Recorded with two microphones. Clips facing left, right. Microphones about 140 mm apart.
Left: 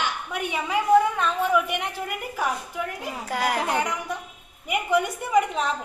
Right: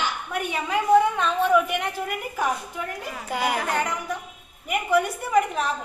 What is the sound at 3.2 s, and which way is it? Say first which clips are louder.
Speech: even; centre (ahead or behind).